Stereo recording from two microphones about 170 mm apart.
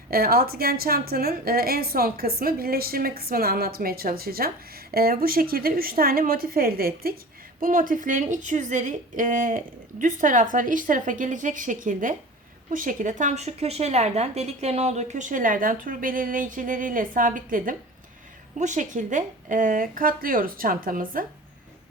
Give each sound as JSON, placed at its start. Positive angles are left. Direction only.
{"t": 0.1, "sound": "a woman's voice", "side_deg": -60}